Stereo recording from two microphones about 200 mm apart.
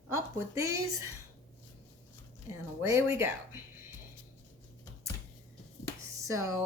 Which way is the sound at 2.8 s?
15° right (ahead or behind).